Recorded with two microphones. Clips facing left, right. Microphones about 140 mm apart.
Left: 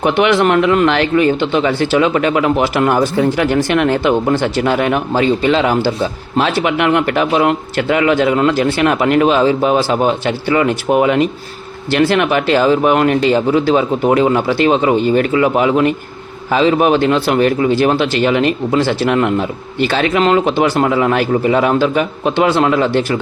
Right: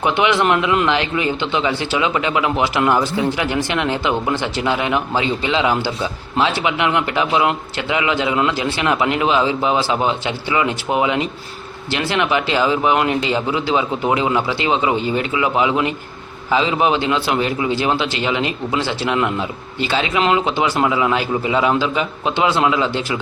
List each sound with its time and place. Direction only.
0.0 s a man's voice: 50° left (ahead or behind)